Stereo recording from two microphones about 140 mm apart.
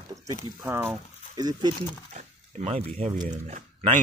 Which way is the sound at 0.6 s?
15° right (ahead or behind).